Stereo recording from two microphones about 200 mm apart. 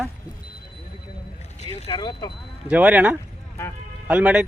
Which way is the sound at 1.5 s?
35° left (ahead or behind).